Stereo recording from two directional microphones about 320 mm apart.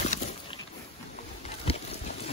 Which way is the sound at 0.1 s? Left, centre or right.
Left.